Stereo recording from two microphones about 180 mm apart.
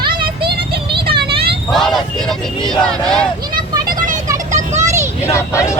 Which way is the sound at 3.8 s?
45° right (ahead or behind).